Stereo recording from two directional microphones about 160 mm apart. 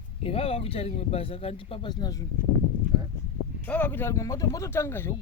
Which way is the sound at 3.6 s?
10° left (ahead or behind).